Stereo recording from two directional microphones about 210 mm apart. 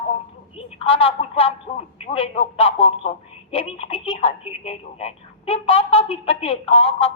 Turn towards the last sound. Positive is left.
turn(degrees=25)  # may be behind; listen again after turning